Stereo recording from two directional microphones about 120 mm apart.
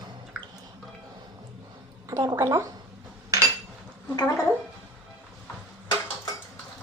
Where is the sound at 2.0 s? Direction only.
25° right (ahead or behind).